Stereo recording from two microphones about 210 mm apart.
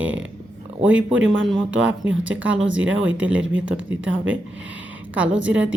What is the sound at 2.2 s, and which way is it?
Speech, 5° right (ahead or behind).